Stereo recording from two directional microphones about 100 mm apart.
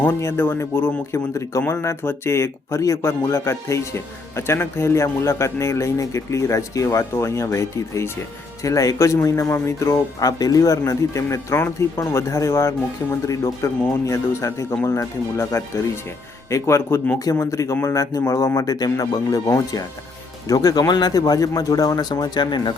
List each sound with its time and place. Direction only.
0.0 s speech: 25° left (ahead or behind); by 22.7 s 50° left (ahead or behind)